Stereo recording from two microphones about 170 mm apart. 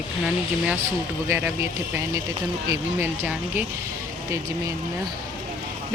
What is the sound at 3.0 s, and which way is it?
Speech, 10° right (ahead or behind).